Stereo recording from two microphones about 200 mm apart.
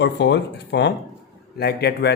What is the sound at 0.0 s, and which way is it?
Speech, 55° left (ahead or behind).